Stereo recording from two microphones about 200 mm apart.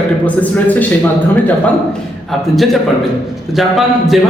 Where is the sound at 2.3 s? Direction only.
Centre (ahead or behind).